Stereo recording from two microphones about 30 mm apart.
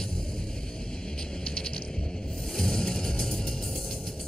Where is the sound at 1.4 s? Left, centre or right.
Left.